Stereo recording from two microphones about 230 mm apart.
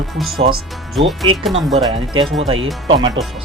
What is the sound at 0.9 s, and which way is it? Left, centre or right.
Speech, centre.